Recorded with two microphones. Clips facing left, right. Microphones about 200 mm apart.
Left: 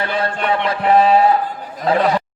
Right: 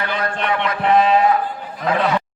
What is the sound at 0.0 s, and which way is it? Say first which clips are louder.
Chant: left 2 dB; 30° left (ahead or behind).